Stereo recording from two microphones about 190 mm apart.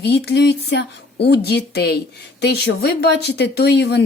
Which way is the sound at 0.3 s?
60° left (ahead or behind).